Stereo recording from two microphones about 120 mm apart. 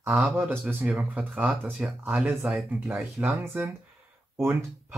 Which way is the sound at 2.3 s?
Centre (ahead or behind).